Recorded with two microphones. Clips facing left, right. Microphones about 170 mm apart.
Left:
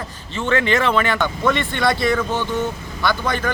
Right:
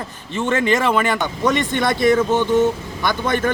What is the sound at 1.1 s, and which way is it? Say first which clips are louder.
Speech: right 1 dB; 20° right (ahead or behind).